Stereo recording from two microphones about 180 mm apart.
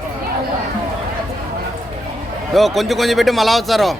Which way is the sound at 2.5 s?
Centre (ahead or behind).